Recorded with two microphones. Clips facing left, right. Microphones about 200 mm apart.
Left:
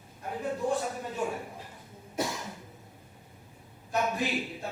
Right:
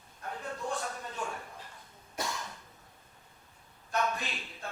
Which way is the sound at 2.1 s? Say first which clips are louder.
Left 5 dB; 15° left (ahead or behind).